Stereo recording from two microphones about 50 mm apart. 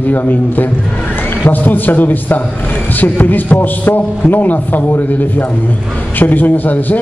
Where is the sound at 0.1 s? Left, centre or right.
Left.